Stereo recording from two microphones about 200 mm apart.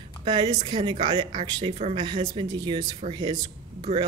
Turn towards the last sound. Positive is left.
turn(degrees=-25)  # may be behind; listen again after turning